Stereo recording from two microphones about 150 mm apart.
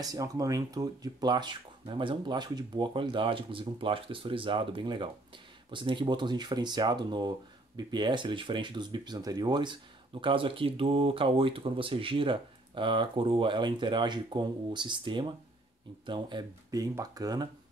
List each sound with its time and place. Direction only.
0.0 s speech: 25° right (ahead or behind)